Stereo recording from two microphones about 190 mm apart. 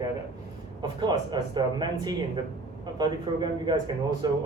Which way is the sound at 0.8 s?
25° right (ahead or behind).